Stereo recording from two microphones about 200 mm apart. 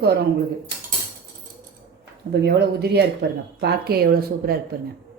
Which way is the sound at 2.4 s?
55° right (ahead or behind).